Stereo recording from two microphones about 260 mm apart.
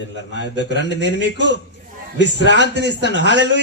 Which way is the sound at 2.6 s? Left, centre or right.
Right.